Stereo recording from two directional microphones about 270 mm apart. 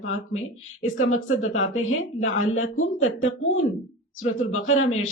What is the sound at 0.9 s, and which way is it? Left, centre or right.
Speech, left.